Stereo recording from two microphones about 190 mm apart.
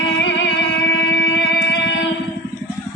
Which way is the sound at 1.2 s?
75° left (ahead or behind).